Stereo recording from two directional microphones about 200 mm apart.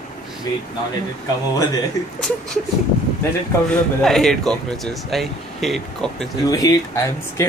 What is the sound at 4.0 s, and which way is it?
Speech, centre (ahead or behind).